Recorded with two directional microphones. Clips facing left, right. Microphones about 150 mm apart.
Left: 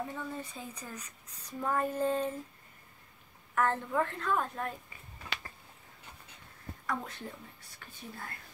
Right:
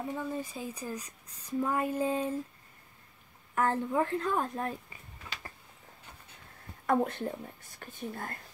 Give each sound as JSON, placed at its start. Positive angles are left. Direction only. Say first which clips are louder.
{"t": 0.1, "sound": "speech", "louder": "right 5 dB", "side_deg": -10}
{"t": 3.5, "sound": "a woman's voice", "louder": "right 2 dB", "side_deg": -20}
{"t": 4.2, "sound": "speech", "louder": "right 1 dB", "side_deg": -35}
{"t": 6.9, "sound": "speech", "louder": "right 10 dB", "side_deg": -55}
{"t": 7.8, "sound": "speech", "louder": "right 7 dB", "side_deg": -45}